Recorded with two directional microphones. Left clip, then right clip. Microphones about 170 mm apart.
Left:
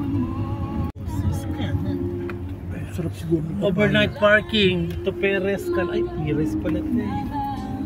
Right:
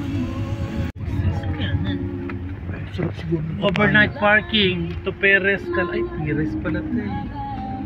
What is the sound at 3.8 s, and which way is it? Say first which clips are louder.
A man's voice: right 2 dB; 15° right (ahead or behind).